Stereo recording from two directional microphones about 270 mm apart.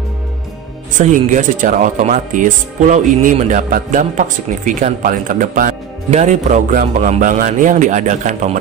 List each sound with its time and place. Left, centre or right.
0.9 s speech: right